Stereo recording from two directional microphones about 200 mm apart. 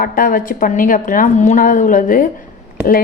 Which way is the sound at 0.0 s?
45° left (ahead or behind).